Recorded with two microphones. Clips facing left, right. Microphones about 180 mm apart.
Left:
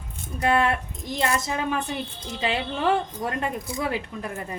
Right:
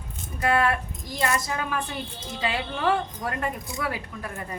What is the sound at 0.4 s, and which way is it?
Speech, 25° left (ahead or behind).